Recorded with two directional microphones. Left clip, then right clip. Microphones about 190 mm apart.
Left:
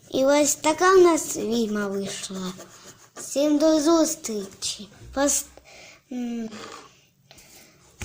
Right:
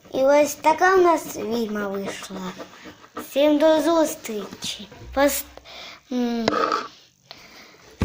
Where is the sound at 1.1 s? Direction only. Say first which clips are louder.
Right 2 dB; 45° left (ahead or behind).